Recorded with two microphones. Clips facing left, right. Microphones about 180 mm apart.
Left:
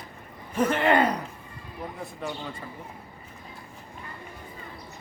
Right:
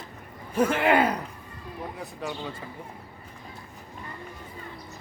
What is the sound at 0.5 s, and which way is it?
Speech, 10° right (ahead or behind).